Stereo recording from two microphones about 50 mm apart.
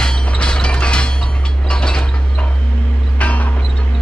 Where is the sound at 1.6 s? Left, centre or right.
Centre.